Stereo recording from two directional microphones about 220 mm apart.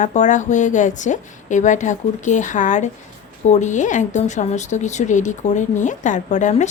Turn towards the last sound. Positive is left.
turn(degrees=35)  # may be behind; listen again after turning